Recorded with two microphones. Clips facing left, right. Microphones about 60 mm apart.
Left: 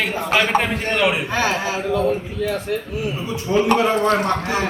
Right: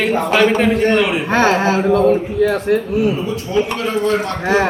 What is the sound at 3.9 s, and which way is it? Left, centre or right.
Speech, left.